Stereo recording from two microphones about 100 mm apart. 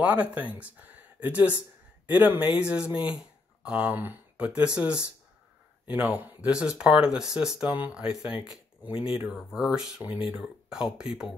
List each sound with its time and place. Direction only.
0.0 s speech: 15° right (ahead or behind)
8.9 s speech: 65° left (ahead or behind)
9.3 s speech: centre (ahead or behind)